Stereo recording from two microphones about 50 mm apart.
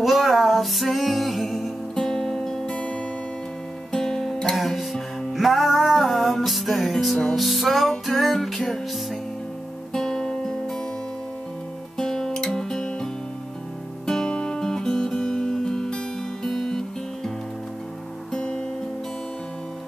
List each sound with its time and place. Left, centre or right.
0.0 s music: centre
9.9 s music: centre
12.0 s music: centre
14.3 s guitar: centre
16.4 s music: centre
18.3 s guitar: centre